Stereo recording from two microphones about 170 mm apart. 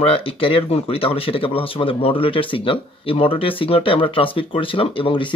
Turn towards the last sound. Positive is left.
turn(degrees=30)  # may be behind; listen again after turning